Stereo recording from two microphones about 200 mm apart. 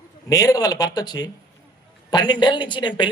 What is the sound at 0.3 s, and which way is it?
A man's voice, 15° left (ahead or behind).